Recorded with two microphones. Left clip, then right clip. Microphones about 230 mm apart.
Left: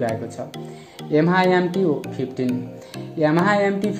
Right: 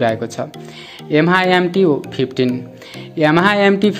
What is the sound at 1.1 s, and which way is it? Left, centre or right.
Speech, centre.